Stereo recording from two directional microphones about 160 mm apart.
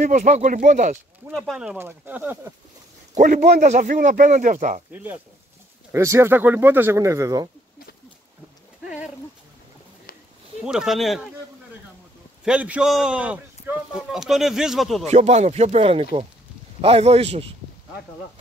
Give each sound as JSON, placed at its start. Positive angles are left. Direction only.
{"t": 0.0, "sound": "speech", "side_deg": -45}
{"t": 1.3, "sound": "speech", "side_deg": -5}
{"t": 3.2, "sound": "speech", "side_deg": -50}
{"t": 4.9, "sound": "speech", "side_deg": -10}
{"t": 8.8, "sound": "speech", "side_deg": -5}
{"t": 10.6, "sound": "speech", "side_deg": -5}
{"t": 12.4, "sound": "speech", "side_deg": -10}
{"t": 15.0, "sound": "speech", "side_deg": -45}